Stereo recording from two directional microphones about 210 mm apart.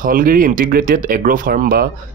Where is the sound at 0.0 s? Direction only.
40° right (ahead or behind).